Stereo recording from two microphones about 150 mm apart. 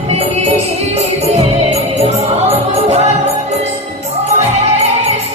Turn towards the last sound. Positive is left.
turn(degrees=-45)  # may be behind; listen again after turning